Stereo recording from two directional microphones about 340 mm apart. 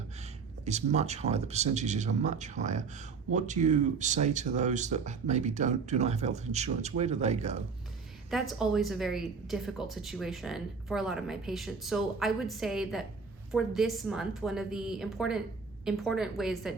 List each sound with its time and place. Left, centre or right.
0.6 s speech: centre
8.3 s a woman's voice: centre